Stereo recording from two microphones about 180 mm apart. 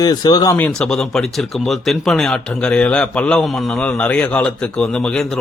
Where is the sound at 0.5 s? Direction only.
5° left (ahead or behind).